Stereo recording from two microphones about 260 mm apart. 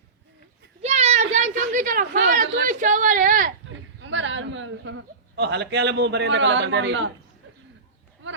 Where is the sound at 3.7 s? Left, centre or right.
Right.